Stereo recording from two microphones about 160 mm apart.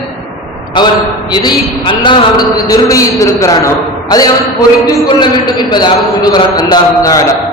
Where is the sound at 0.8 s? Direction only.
30° left (ahead or behind).